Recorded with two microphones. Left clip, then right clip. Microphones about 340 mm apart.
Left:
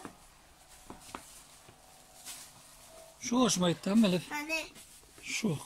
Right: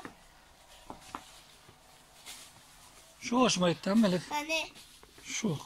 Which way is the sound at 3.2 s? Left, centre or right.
Centre.